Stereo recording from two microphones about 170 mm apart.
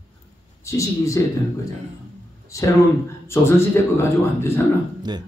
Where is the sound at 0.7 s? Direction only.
20° left (ahead or behind).